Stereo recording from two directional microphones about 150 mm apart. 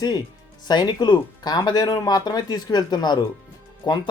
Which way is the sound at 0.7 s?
30° left (ahead or behind).